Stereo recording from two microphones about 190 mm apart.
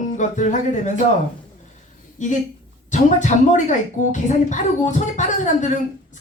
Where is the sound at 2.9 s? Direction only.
40° left (ahead or behind).